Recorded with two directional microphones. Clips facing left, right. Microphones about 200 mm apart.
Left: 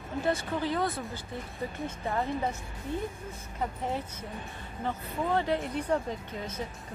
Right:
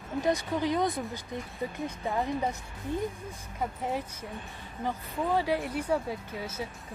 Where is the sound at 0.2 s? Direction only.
15° right (ahead or behind).